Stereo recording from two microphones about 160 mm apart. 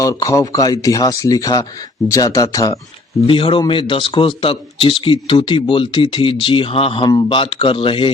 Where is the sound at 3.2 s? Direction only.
35° left (ahead or behind).